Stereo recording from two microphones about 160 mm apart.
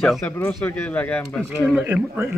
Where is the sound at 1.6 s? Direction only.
10° right (ahead or behind).